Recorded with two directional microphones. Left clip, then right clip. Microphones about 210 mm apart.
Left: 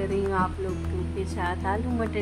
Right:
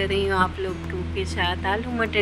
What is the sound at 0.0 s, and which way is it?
Music, 30° right (ahead or behind).